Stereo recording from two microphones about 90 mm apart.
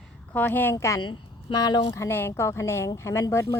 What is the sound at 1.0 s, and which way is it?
Speech, 55° left (ahead or behind).